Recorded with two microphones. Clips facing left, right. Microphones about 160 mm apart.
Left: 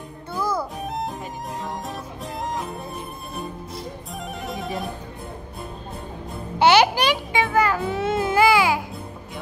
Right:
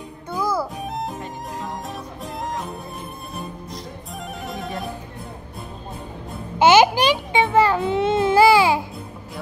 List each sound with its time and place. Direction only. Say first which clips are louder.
0.3 s music: right 2 dB; 10° right (ahead or behind)
4.5 s music: left 1 dB; centre (ahead or behind)
6.6 s a sound: right 2 dB; 15° right (ahead or behind)